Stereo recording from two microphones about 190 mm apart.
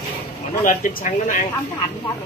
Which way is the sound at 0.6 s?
45° left (ahead or behind).